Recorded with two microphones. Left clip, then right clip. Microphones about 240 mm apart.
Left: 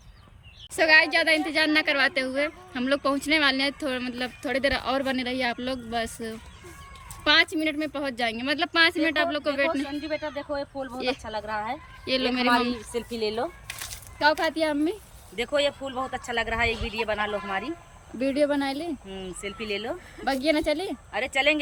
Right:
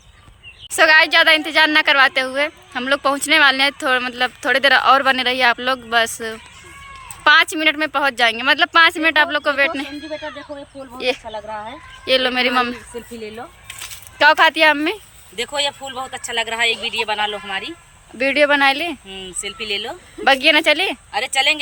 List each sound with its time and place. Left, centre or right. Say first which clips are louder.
0.7 s a woman's voice: right 7 dB; centre
10.9 s a woman's voice: right 8 dB; centre
14.2 s a woman's voice: right 11 dB; centre
14.7 s speech: right 10 dB; right
15.4 s speech: right 4 dB; centre
18.3 s speech: right 10 dB; right
18.6 s a woman's voice: right 15 dB; centre
19.0 s speech: right 6 dB; centre
20.2 s speech: right 11 dB; centre
21.1 s speech: right 4 dB; centre